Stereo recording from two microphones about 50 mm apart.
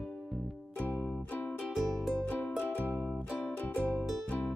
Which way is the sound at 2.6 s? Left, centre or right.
Left.